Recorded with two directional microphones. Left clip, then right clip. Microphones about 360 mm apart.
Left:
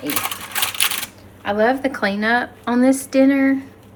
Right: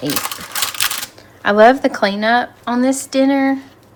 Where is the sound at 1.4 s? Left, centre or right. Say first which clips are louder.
Right 8 dB; right.